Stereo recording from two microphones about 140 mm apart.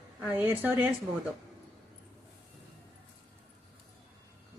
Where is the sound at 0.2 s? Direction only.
10° right (ahead or behind).